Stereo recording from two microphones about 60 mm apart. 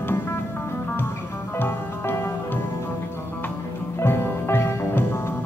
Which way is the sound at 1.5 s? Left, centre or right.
Left.